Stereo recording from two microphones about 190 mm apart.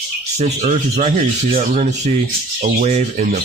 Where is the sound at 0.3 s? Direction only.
35° right (ahead or behind).